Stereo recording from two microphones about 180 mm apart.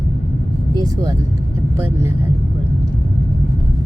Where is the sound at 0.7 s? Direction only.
20° right (ahead or behind).